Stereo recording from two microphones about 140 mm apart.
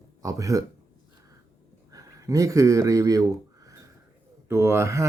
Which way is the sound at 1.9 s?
25° right (ahead or behind).